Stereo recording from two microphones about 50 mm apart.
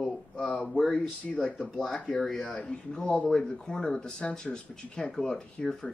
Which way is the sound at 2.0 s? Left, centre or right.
Centre.